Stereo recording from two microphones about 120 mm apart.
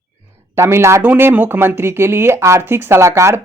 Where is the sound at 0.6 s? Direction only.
20° right (ahead or behind).